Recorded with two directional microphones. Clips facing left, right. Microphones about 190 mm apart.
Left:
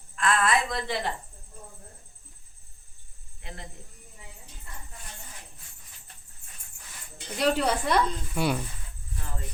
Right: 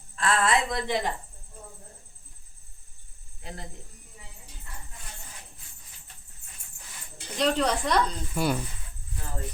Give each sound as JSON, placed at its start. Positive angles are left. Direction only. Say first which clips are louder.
{"t": 0.2, "sound": "a sound", "louder": "even", "side_deg": -30}
{"t": 3.4, "sound": "speech", "louder": "right 2 dB", "side_deg": -35}
{"t": 7.3, "sound": "speech", "louder": "even", "side_deg": 10}